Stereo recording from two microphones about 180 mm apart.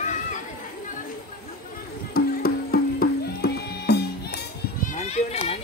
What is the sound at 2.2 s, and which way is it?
Music, 55° left (ahead or behind).